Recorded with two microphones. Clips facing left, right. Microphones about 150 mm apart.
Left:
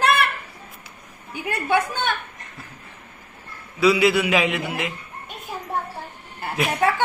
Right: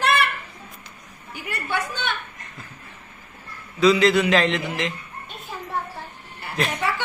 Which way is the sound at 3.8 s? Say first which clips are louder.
Right 1 dB; 10° left (ahead or behind).